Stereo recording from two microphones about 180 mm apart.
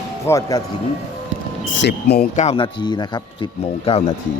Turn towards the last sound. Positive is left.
turn(degrees=30)  # may be behind; listen again after turning